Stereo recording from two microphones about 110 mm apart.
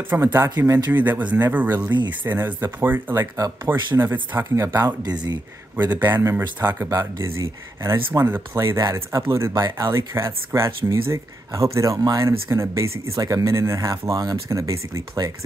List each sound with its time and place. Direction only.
0.1 s speech: 25° right (ahead or behind)
1.9 s speech: 45° right (ahead or behind)
2.2 s speech: 20° right (ahead or behind)
5.9 s speech: 20° right (ahead or behind)